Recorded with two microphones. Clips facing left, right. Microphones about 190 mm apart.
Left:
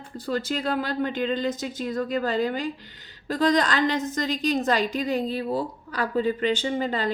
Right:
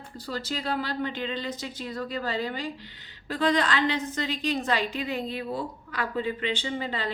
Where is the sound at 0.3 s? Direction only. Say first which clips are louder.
Left 5 dB; 50° left (ahead or behind).